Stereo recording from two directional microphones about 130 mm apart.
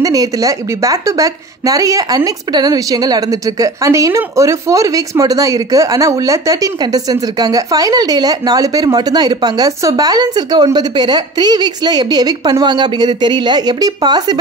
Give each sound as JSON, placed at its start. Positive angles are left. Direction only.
{"t": 0.0, "sound": "a woman's voice", "side_deg": -25}